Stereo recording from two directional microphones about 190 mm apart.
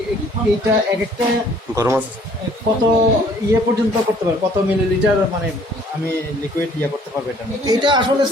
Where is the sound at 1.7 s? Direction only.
15° right (ahead or behind).